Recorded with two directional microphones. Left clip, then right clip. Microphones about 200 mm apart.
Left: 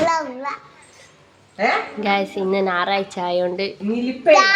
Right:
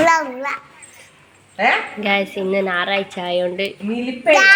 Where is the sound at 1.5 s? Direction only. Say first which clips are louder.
Right 3 dB; centre (ahead or behind).